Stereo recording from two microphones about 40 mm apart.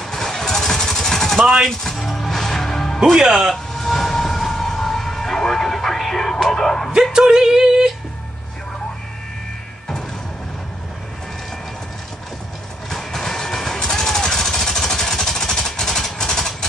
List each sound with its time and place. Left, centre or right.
0.0 s vehicle: centre
1.7 s music: centre
3.2 s a man's voice: centre
3.7 s vehicle: centre
6.9 s a sound: centre
12.9 s music: centre